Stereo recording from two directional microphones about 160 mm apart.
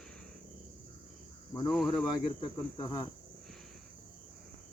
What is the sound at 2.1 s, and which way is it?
Cricket, 25° left (ahead or behind).